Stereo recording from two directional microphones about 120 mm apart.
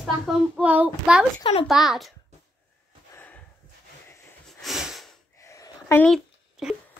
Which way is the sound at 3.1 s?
15° left (ahead or behind).